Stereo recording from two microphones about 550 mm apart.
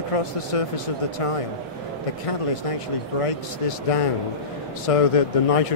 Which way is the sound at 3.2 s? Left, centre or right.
Left.